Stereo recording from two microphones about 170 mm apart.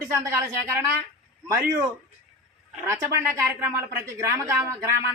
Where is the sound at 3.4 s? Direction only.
15° right (ahead or behind).